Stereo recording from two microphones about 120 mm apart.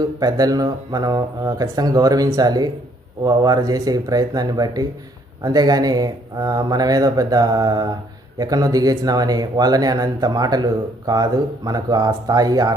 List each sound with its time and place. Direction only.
0.2 s speech: 30° right (ahead or behind)